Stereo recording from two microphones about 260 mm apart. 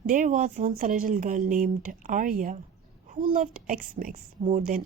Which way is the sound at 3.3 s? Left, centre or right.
Right.